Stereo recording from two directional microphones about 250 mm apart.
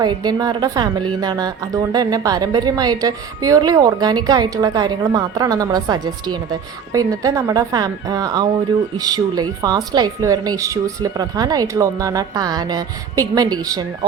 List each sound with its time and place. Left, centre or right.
0.0 s a woman's voice: centre